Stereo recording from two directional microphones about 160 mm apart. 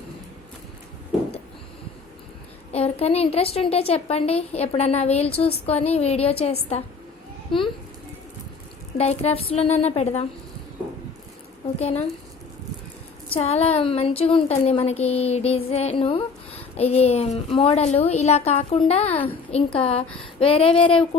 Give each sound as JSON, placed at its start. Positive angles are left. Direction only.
{"t": 2.7, "sound": "a woman's voice", "side_deg": 40}
{"t": 9.0, "sound": "a woman's voice", "side_deg": 40}
{"t": 11.8, "sound": "a woman's voice", "side_deg": 40}
{"t": 13.3, "sound": "a woman's voice", "side_deg": 40}